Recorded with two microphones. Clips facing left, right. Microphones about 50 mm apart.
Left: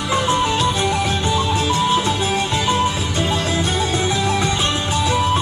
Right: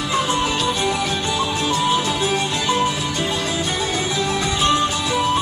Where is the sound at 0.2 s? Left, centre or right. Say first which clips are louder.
Left 4 dB; centre.